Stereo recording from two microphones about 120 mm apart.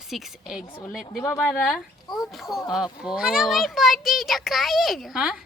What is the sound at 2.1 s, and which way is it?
Speech, centre (ahead or behind).